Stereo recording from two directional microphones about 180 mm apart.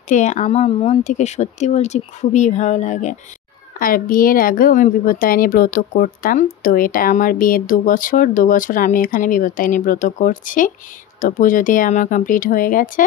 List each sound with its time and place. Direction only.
0.1 s a woman's voice: 40° left (ahead or behind)